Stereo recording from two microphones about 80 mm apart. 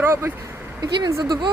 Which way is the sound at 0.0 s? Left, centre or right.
Right.